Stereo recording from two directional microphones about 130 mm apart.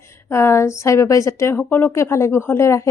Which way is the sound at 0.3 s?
20° left (ahead or behind).